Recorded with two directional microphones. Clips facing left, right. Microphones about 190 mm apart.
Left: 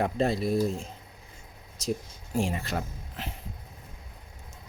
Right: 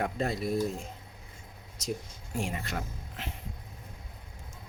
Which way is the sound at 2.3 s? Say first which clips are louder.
Left 5 dB; 30° left (ahead or behind).